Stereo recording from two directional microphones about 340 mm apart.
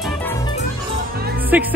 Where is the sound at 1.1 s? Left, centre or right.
Right.